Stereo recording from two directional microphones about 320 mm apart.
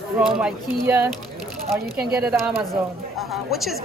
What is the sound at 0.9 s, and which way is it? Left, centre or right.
Speech, centre.